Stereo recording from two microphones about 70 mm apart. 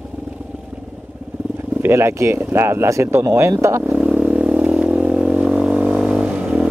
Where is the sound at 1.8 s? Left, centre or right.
Right.